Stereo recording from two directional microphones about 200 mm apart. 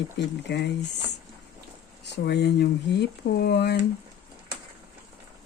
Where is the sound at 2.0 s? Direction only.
55° left (ahead or behind).